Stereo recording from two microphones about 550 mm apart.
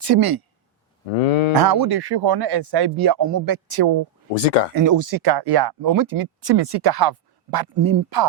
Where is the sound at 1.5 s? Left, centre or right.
Right.